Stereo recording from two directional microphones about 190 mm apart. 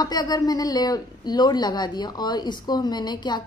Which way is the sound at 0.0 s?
20° left (ahead or behind).